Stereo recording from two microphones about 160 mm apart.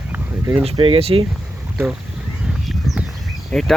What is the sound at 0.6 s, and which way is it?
Speech, 35° right (ahead or behind).